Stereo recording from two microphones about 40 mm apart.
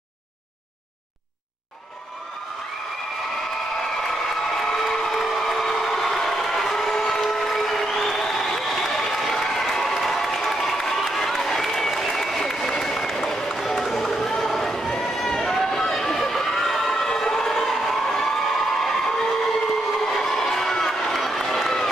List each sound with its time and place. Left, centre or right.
4.0 s a sound: centre
11.4 s applause: centre
15.9 s crowd: centre